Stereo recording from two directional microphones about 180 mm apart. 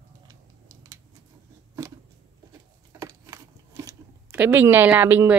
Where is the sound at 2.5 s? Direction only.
20° right (ahead or behind).